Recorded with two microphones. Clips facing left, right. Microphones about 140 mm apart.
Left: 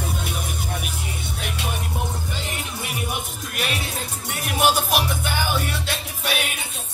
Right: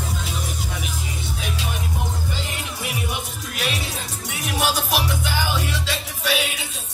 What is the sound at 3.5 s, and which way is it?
Music, 55° left (ahead or behind).